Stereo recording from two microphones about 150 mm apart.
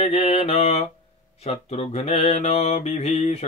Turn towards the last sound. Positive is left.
turn(degrees=45)  # may be behind; listen again after turning